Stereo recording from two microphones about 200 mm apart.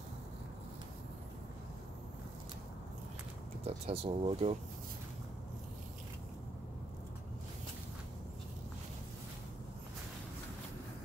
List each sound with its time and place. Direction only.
3.6 s speech: 30° right (ahead or behind)